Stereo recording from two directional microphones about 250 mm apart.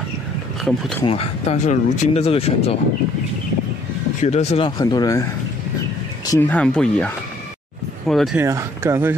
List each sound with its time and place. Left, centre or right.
1.0 s speech: left
4.2 s speech: left
6.3 s speech: centre
8.1 s speech: centre
8.4 s speech: centre